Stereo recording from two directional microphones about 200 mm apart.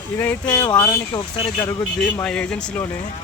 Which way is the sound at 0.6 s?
20° left (ahead or behind).